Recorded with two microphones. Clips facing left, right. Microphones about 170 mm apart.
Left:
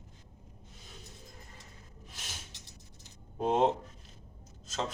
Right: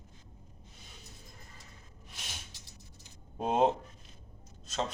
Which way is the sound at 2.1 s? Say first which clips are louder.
Even; centre (ahead or behind).